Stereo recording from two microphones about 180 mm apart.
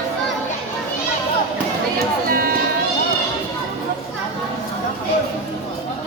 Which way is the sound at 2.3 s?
55° right (ahead or behind).